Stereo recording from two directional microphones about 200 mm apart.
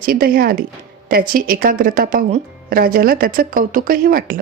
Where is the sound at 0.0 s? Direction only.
45° right (ahead or behind).